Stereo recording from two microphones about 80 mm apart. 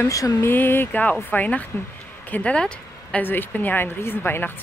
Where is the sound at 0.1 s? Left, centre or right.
Left.